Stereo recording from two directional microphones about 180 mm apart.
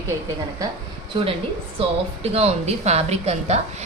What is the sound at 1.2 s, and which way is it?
Speech, 25° right (ahead or behind).